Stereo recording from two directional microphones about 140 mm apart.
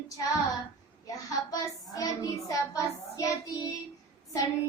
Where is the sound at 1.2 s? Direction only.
25° left (ahead or behind).